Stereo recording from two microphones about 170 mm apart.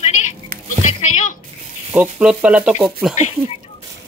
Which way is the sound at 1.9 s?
10° right (ahead or behind).